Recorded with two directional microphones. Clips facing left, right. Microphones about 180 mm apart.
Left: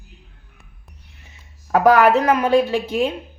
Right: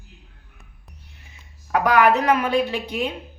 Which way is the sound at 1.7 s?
40° left (ahead or behind).